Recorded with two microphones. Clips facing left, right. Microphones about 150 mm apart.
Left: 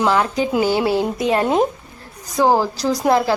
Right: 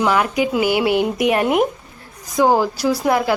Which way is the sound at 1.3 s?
25° left (ahead or behind).